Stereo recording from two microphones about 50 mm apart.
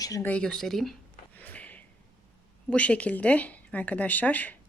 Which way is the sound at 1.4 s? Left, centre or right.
Left.